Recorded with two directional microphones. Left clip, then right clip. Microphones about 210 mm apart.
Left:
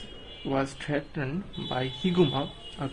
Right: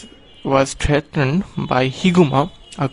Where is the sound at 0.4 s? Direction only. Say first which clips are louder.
Right 13 dB; 45° right (ahead or behind).